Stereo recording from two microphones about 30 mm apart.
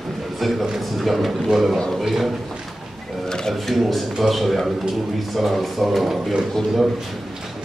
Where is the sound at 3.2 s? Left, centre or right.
Centre.